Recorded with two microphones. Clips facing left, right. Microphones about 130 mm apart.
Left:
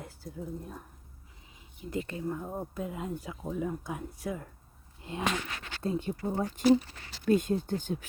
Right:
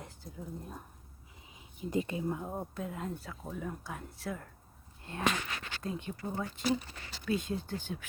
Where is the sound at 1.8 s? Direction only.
20° right (ahead or behind).